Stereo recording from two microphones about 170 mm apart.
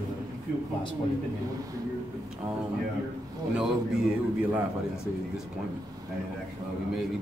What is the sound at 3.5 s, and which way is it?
A man's voice, 5° right (ahead or behind).